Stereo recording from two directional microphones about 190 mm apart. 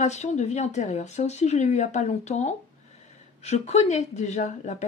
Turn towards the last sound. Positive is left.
turn(degrees=40)  # may be behind; listen again after turning